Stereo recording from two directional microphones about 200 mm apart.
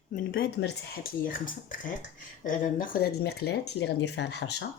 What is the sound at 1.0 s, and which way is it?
Speech, 45° left (ahead or behind).